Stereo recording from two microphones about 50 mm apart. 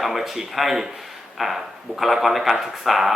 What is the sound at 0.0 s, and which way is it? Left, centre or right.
Speech, centre.